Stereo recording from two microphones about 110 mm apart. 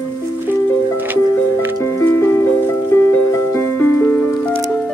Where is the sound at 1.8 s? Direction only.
25° left (ahead or behind); by 4.9 s 10° left (ahead or behind).